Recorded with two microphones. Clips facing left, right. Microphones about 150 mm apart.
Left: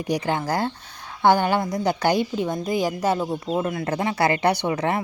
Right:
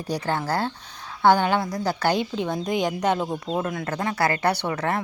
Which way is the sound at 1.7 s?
20° left (ahead or behind).